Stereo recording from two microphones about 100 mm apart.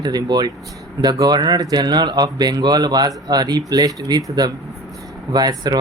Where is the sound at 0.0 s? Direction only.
45° right (ahead or behind).